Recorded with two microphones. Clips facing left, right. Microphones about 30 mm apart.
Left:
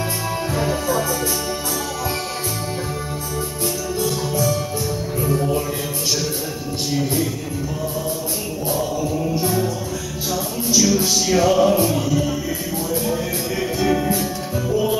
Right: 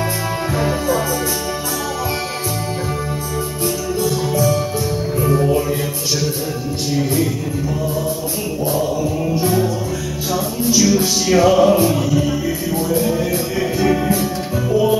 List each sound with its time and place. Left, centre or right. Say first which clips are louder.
5.3 s music: right 4 dB; right
8.7 s music: right 3 dB; centre
11.2 s music: right 4 dB; right
12.9 s music: right 4 dB; centre